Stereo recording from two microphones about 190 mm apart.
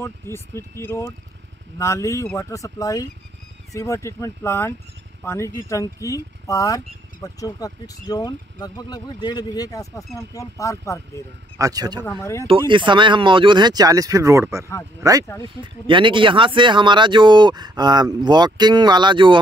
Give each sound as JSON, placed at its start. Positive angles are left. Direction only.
{"t": 0.0, "sound": "speech", "side_deg": 15}
{"t": 11.5, "sound": "speech", "side_deg": -20}
{"t": 12.2, "sound": "speech", "side_deg": 15}
{"t": 12.4, "sound": "speech", "side_deg": -25}
{"t": 15.2, "sound": "speech", "side_deg": 15}
{"t": 15.6, "sound": "speech", "side_deg": -25}